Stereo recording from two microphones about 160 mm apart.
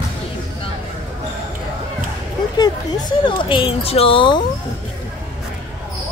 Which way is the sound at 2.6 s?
30° left (ahead or behind).